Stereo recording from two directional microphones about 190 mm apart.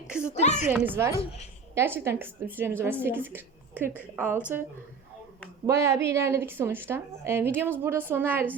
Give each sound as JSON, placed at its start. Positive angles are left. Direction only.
{"t": 0.3, "sound": "speech", "side_deg": 35}
{"t": 0.7, "sound": "a woman's voice", "side_deg": -10}
{"t": 5.6, "sound": "a woman's voice", "side_deg": -15}